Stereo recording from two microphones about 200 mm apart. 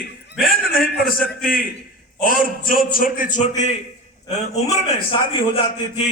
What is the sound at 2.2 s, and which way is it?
A man's voice, 45° left (ahead or behind).